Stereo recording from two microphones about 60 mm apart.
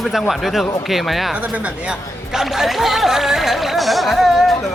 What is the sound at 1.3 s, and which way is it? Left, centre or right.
Speech, right.